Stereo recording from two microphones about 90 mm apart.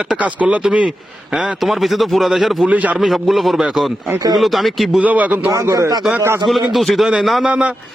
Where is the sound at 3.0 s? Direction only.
Centre (ahead or behind).